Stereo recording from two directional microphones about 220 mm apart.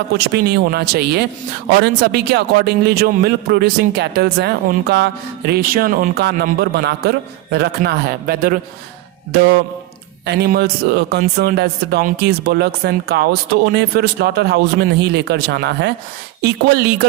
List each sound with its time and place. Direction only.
0.3 s a man's voice: 45° right (ahead or behind)